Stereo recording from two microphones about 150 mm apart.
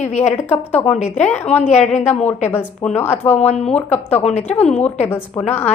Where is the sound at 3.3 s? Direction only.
45° left (ahead or behind).